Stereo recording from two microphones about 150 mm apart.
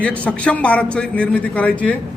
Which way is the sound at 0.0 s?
10° left (ahead or behind).